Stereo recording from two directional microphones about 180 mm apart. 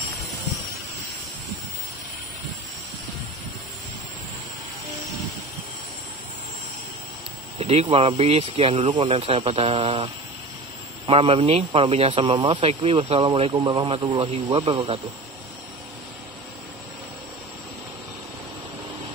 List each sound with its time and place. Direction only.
7.5 s speech: 35° right (ahead or behind)
13.5 s speech: 15° right (ahead or behind)
13.7 s a man's voice: 30° right (ahead or behind)